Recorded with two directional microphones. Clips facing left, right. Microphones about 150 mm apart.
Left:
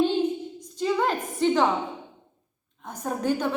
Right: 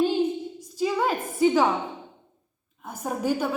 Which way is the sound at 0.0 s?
10° right (ahead or behind).